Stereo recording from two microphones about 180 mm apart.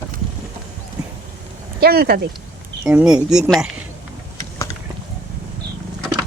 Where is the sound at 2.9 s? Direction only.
5° right (ahead or behind).